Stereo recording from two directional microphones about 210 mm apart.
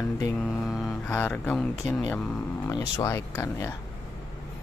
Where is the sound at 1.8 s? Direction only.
20° left (ahead or behind).